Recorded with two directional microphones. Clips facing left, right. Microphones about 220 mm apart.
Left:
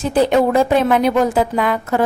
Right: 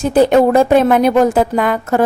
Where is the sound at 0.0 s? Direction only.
45° right (ahead or behind).